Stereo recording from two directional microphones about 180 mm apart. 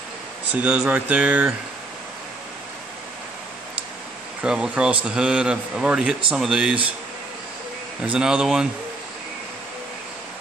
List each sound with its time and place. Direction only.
0.6 s speech: 5° right (ahead or behind)
4.4 s a man's voice: 5° right (ahead or behind)
8.0 s a man's voice: 5° right (ahead or behind)